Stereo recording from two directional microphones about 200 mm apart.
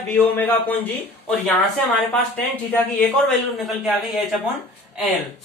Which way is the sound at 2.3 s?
5° left (ahead or behind).